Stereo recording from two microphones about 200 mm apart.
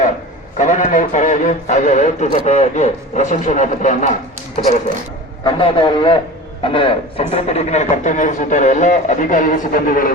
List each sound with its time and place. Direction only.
0.6 s a man's voice: 40° left (ahead or behind)
5.5 s a man's voice: 25° left (ahead or behind); by 10.1 s 45° left (ahead or behind)